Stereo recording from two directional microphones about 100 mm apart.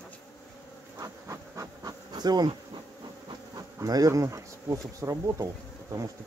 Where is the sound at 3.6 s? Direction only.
35° right (ahead or behind).